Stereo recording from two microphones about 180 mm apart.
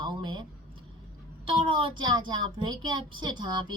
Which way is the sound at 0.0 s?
25° right (ahead or behind).